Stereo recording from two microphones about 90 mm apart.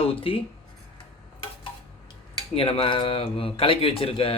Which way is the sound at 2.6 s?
90° left.